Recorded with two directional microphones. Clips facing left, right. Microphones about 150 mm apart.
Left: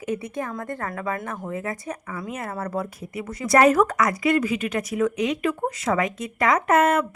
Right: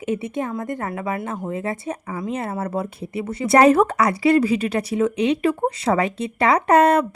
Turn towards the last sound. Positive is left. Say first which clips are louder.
# right 4 dB
turn(degrees=-35)  # may be behind; listen again after turning